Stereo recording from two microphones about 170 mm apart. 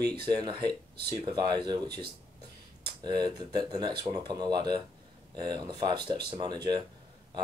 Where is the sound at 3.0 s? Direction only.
25° right (ahead or behind).